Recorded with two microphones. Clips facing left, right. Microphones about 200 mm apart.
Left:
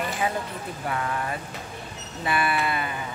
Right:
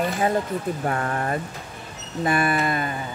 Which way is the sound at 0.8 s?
45° right (ahead or behind).